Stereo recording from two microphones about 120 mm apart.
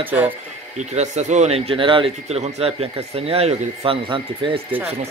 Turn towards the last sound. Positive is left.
turn(degrees=-45)  # may be behind; listen again after turning